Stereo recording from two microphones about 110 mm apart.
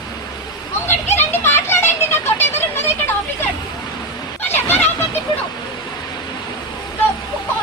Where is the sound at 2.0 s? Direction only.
20° left (ahead or behind).